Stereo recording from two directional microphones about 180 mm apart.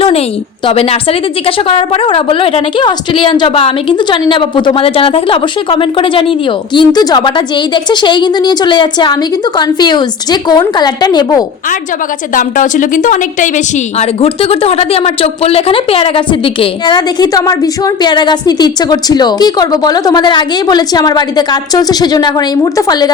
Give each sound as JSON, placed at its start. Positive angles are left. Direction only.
{"t": 0.0, "sound": "a woman's voice", "side_deg": 35}
{"t": 12.3, "sound": "a woman's voice", "side_deg": 45}